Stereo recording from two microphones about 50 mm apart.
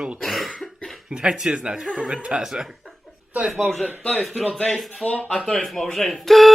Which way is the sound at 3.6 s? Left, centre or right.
Centre.